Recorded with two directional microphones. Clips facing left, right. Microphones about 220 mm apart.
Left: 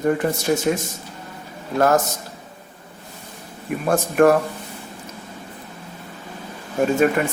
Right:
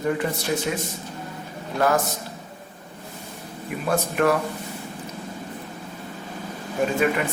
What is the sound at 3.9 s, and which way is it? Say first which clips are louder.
Speech: left 6 dB; 45° left (ahead or behind).